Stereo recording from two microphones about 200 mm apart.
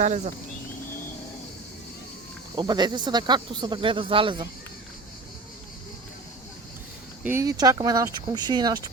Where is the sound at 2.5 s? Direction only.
20° right (ahead or behind).